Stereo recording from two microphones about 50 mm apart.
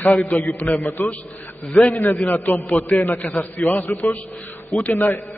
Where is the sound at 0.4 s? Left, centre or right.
Left.